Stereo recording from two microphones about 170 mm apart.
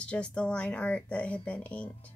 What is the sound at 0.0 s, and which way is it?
Speech, 5° left (ahead or behind).